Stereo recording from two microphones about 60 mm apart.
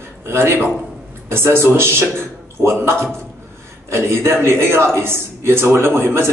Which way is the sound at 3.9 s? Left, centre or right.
Right.